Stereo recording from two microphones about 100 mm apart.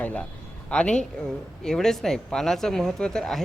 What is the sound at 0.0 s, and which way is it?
A man's voice, 15° left (ahead or behind).